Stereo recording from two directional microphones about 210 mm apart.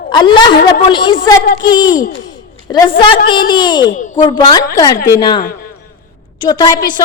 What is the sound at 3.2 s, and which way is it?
A woman's voice, 20° left (ahead or behind).